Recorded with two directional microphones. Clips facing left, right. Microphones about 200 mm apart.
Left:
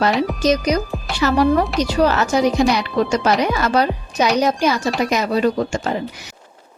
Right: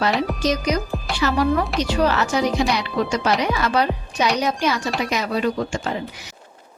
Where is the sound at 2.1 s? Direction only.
45° left (ahead or behind).